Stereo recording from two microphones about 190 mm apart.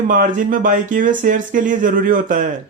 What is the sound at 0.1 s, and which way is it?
Speech, 45° right (ahead or behind).